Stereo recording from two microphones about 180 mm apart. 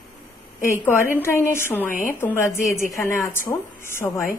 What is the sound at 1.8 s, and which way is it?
Speech, 45° left (ahead or behind).